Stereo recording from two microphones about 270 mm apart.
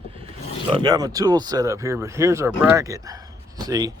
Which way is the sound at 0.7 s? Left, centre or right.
Centre.